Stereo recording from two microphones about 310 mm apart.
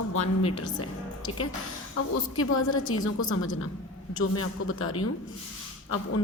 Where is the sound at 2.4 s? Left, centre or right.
Left.